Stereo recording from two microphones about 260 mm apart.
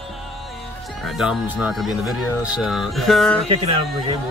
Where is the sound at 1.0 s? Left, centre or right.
Centre.